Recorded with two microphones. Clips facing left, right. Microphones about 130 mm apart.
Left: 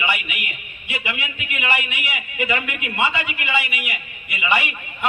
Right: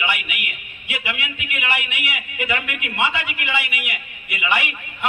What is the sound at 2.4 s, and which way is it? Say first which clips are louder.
Speech: left 2 dB; 5° right (ahead or behind).